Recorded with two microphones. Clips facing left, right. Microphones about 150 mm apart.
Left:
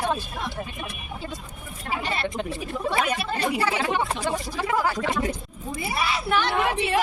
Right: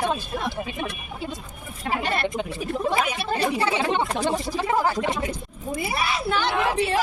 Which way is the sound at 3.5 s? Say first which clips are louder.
Right 1 dB; 25° right (ahead or behind).